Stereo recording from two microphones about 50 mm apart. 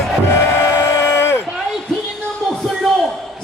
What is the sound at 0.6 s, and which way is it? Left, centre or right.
Vehicle, left.